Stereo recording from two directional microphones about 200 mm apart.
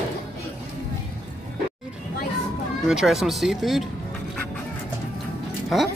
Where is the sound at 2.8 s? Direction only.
Centre (ahead or behind).